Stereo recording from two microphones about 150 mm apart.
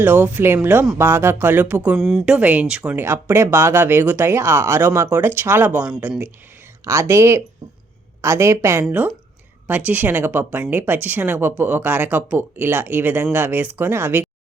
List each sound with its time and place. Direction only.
0.0 s speech: 15° right (ahead or behind)
2.0 s speech: centre (ahead or behind); by 14.3 s 15° right (ahead or behind)